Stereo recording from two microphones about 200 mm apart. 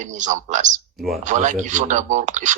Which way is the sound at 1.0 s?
Centre (ahead or behind).